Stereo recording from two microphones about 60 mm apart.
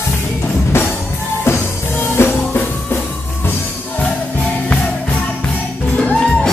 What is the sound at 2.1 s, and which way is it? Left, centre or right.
Music, left.